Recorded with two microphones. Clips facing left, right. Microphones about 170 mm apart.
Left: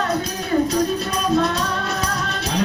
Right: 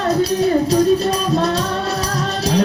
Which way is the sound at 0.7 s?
35° right (ahead or behind).